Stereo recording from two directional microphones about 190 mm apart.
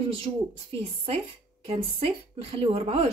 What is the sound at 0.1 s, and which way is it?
A woman's voice, 30° right (ahead or behind).